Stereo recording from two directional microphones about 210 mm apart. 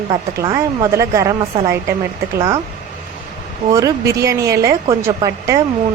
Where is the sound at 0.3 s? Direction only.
15° right (ahead or behind).